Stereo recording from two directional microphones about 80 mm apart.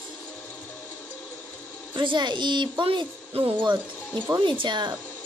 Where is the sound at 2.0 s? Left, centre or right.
Right.